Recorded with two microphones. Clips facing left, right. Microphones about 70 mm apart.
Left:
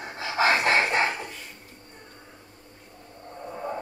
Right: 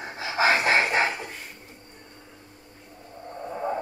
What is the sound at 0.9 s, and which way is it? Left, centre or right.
Dog, centre.